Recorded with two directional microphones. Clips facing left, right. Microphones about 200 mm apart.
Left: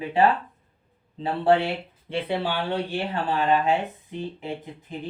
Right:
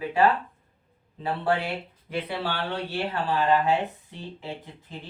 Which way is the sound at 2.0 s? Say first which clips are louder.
Left 4 dB; 30° left (ahead or behind).